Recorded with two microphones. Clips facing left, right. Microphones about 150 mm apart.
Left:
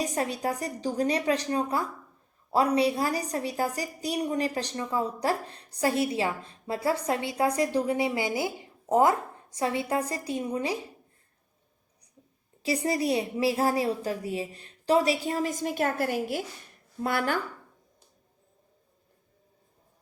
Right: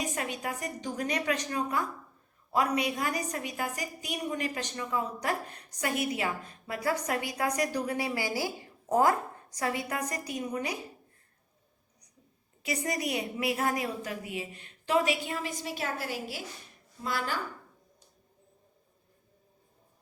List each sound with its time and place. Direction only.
0.0 s a woman's voice: 35° left (ahead or behind)
12.6 s a woman's voice: 30° left (ahead or behind); by 17.4 s 60° left (ahead or behind)